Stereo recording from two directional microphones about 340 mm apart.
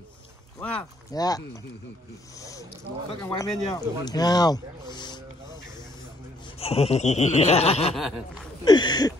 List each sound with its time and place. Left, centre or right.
0.6 s speech: centre
3.2 s speech: centre
4.9 s a sound: centre
6.6 s speech: centre